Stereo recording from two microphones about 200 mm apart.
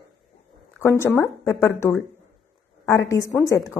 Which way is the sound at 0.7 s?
15° left (ahead or behind).